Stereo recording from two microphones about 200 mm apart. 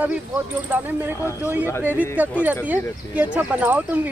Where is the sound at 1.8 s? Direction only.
10° right (ahead or behind).